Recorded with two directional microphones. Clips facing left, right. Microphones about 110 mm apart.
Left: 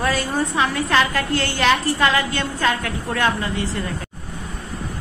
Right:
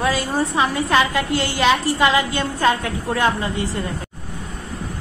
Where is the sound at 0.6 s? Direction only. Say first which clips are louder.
Right 1 dB; 15° right (ahead or behind).